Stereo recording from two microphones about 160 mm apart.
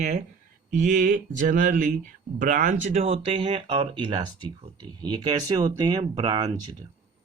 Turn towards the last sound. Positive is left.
turn(degrees=-40)  # may be behind; listen again after turning